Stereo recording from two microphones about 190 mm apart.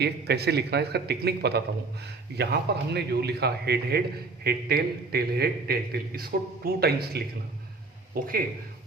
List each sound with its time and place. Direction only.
0.0 s a man's voice: 60° right (ahead or behind)